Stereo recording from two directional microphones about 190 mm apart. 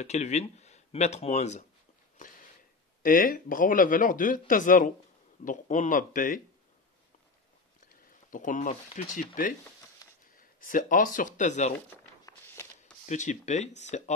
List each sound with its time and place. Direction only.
0.0 s speech: 35° left (ahead or behind)
3.0 s speech: 45° left (ahead or behind)
7.9 s speech: 45° left (ahead or behind)
12.3 s walk: 15° left (ahead or behind)
13.0 s speech: 40° left (ahead or behind)